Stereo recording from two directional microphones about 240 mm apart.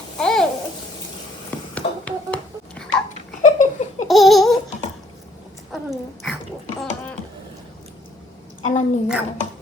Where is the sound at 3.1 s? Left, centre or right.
Left.